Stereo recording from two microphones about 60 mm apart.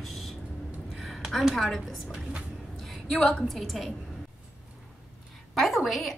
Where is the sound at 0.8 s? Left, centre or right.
Centre.